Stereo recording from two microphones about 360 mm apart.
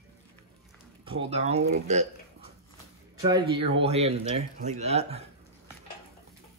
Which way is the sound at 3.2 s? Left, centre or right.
Centre.